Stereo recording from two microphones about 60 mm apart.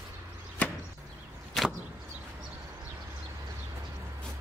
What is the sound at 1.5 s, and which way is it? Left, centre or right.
Arrow, centre.